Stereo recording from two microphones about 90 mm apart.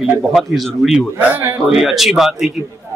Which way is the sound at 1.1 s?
25° right (ahead or behind).